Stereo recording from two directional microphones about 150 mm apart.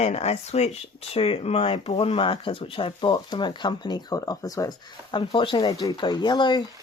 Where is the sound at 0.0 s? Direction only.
45° left (ahead or behind).